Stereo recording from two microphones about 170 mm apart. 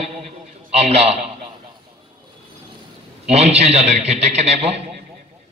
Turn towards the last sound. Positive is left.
turn(degrees=-40)  # may be behind; listen again after turning